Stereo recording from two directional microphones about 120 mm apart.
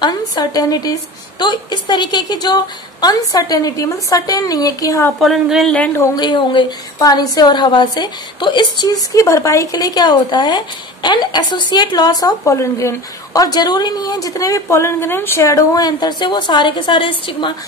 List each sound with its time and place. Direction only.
0.0 s a woman's voice: 35° left (ahead or behind)
5.2 s speech: centre (ahead or behind)
5.8 s a woman's voice: 20° left (ahead or behind)
6.1 s a woman's voice: 40° left (ahead or behind)